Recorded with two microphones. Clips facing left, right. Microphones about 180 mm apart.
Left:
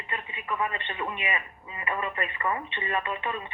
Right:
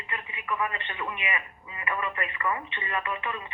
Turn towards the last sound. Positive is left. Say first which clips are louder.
# left 1 dB
turn(degrees=25)  # may be behind; listen again after turning